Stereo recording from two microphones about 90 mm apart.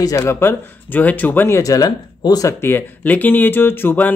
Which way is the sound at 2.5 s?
25° left (ahead or behind).